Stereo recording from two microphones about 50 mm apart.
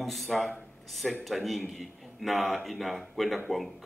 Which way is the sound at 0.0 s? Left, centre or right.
Centre.